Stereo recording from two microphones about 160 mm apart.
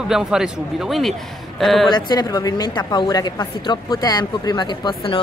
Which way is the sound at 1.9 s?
25° left (ahead or behind).